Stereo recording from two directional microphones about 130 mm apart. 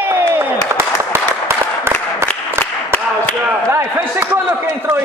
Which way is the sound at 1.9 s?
20° right (ahead or behind).